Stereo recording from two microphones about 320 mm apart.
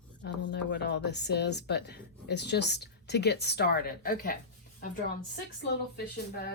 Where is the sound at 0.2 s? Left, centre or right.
Left.